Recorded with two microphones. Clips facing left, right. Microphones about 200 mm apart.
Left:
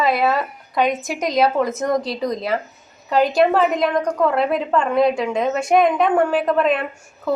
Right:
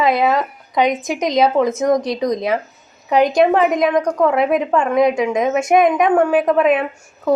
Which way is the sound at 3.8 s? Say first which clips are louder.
Right 3 dB; centre (ahead or behind).